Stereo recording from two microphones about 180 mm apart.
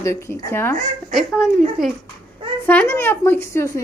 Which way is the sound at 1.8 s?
Centre (ahead or behind).